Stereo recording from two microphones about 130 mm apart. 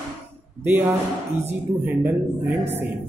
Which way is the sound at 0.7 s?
20° right (ahead or behind).